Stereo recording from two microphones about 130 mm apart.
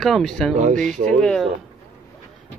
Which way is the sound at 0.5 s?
80° right.